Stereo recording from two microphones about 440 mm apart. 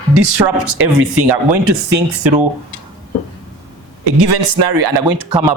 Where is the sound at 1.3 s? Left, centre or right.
Right.